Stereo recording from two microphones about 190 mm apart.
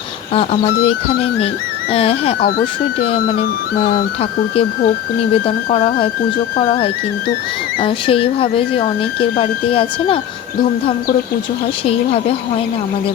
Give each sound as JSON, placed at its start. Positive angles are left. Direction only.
{"t": 0.3, "sound": "speech", "side_deg": 30}
{"t": 1.9, "sound": "speech", "side_deg": 30}
{"t": 3.8, "sound": "speech", "side_deg": 30}